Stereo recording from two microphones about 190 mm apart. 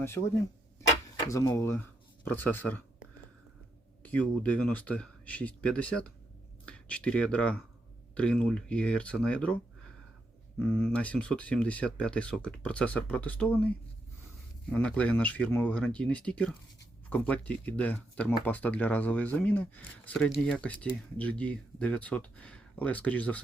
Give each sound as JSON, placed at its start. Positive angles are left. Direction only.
{"t": 0.0, "sound": "speech", "side_deg": 15}
{"t": 1.3, "sound": "speech", "side_deg": 15}
{"t": 4.0, "sound": "speech", "side_deg": 10}
{"t": 10.6, "sound": "speech", "side_deg": 10}